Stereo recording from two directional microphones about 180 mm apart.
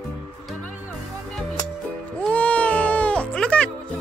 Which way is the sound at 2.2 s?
5° left (ahead or behind).